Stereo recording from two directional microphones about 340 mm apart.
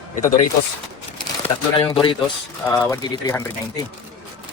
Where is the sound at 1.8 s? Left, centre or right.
Centre.